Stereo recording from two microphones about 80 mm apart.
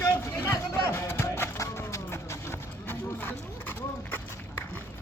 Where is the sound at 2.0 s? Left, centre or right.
Left.